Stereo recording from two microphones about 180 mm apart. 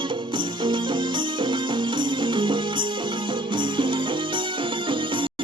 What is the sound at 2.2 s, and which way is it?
Music, 25° right (ahead or behind).